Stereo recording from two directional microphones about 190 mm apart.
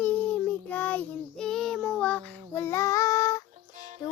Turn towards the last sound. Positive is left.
turn(degrees=-40)  # may be behind; listen again after turning